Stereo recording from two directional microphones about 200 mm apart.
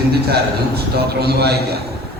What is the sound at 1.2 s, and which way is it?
Speech, 55° right (ahead or behind).